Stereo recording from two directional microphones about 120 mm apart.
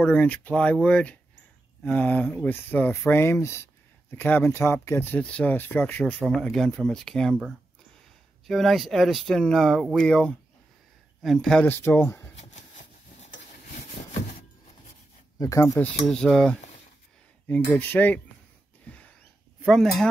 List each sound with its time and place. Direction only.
0.0 s speech: 10° left (ahead or behind)
6.1 s speech: 5° right (ahead or behind)
8.5 s speech: centre (ahead or behind)
11.6 s speech: 20° left (ahead or behind)
12.4 s a sound: 70° left (ahead or behind)
13.7 s sawing: 70° left (ahead or behind)
15.3 s speech: 30° left (ahead or behind)
15.8 s speech: 5° left (ahead or behind)
17.5 s speech: 15° left (ahead or behind)
18.9 s a sound: 10° left (ahead or behind)
19.6 s speech: centre (ahead or behind)